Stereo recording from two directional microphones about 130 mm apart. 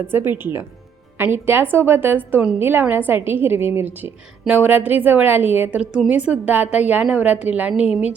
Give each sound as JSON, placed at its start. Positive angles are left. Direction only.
{"t": 0.1, "sound": "a woman's voice", "side_deg": -15}